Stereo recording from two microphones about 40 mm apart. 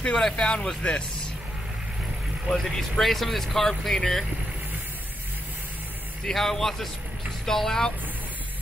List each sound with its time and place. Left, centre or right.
0.0 s speech: centre
2.5 s speech: centre
6.2 s a man's voice: centre